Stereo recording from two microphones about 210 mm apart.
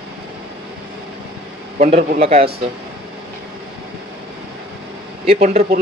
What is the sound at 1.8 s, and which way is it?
Speech, 30° right (ahead or behind).